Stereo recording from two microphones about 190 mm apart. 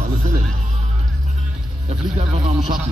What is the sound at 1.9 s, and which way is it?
Music, 35° right (ahead or behind).